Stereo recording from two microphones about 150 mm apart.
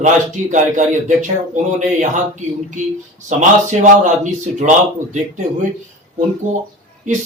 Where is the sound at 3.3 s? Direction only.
55° right (ahead or behind).